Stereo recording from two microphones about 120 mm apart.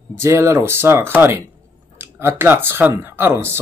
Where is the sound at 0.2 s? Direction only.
25° right (ahead or behind).